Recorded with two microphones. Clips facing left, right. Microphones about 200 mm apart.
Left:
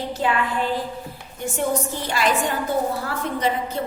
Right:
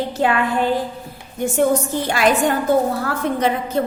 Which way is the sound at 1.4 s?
45° right (ahead or behind).